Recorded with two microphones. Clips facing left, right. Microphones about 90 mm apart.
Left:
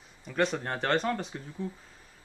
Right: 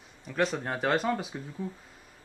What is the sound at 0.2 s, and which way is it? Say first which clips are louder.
A man's voice: even; centre (ahead or behind).